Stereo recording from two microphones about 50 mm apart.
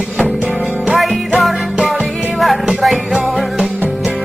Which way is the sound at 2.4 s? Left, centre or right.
Centre.